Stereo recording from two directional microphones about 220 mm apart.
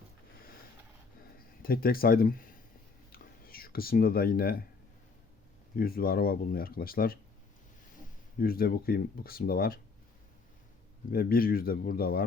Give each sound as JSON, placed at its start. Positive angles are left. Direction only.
{"t": 1.6, "sound": "speech", "side_deg": 40}
{"t": 3.1, "sound": "whispering", "side_deg": 40}
{"t": 5.7, "sound": "speech", "side_deg": 40}
{"t": 8.4, "sound": "speech", "side_deg": 40}
{"t": 11.1, "sound": "speech", "side_deg": 40}